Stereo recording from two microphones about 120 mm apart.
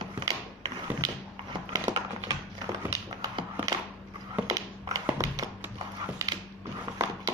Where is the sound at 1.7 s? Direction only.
30° right (ahead or behind).